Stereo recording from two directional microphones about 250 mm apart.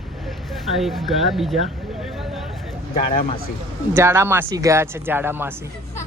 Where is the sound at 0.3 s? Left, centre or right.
Centre.